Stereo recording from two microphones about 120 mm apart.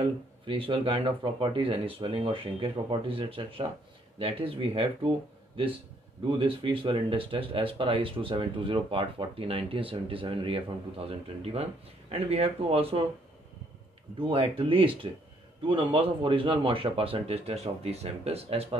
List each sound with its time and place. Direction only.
0.0 s speech: 45° right (ahead or behind)
6.2 s speech: 45° right (ahead or behind)
14.2 s speech: 50° right (ahead or behind)